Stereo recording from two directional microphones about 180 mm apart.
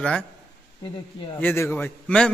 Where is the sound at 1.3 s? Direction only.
10° left (ahead or behind).